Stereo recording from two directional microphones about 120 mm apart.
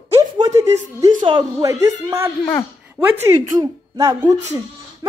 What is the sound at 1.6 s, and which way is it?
A woman's voice, 25° right (ahead or behind).